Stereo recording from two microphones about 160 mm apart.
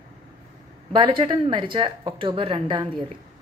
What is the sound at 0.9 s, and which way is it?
Speech, 30° right (ahead or behind).